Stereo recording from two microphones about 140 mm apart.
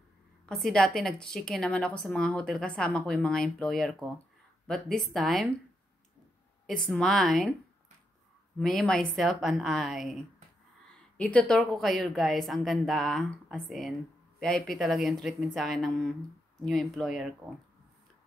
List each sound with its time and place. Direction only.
0.5 s a woman's voice: centre (ahead or behind)
6.9 s a woman's voice: 5° left (ahead or behind)
8.5 s a woman's voice: 5° left (ahead or behind)